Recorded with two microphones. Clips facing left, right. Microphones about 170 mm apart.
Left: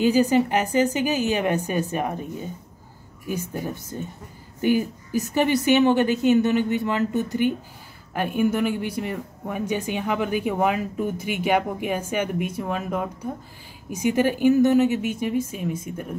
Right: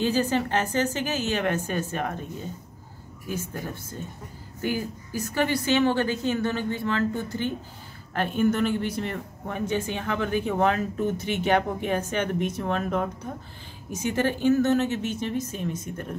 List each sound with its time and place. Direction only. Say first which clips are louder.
0.0 s speech: left 6 dB; 15° left (ahead or behind)
3.3 s speech: left 4 dB; 15° left (ahead or behind)